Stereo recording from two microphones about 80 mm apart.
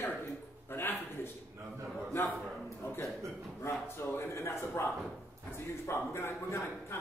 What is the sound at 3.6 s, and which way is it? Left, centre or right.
A man's voice, left.